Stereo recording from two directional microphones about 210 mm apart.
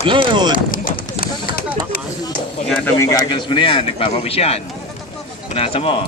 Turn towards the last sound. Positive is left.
turn(degrees=25)  # may be behind; listen again after turning